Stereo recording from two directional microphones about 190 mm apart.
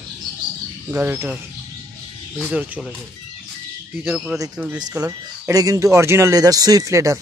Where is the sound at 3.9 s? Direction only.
5° right (ahead or behind).